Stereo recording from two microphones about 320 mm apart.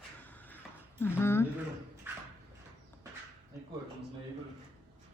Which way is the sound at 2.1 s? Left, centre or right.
Centre.